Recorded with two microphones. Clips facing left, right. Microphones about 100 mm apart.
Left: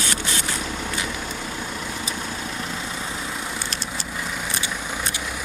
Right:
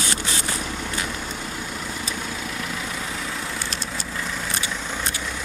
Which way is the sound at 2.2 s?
30° left (ahead or behind).